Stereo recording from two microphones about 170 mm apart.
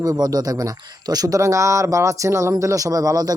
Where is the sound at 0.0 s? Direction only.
20° right (ahead or behind).